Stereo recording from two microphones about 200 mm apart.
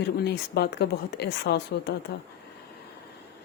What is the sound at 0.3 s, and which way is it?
Speech, 55° left (ahead or behind).